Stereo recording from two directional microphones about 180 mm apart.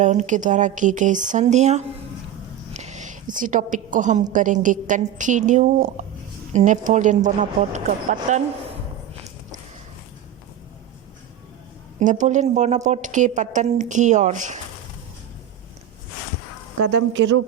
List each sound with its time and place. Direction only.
0.0 s a woman's voice: 40° right (ahead or behind)
2.7 s a sound: 40° right (ahead or behind)
3.3 s a woman's voice: 45° right (ahead or behind)
11.9 s a woman's voice: 45° right (ahead or behind)